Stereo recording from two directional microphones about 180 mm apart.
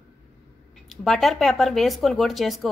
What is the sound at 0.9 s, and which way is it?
A woman's voice, centre (ahead or behind).